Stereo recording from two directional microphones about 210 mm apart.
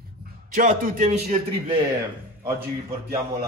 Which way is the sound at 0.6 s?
40° right (ahead or behind).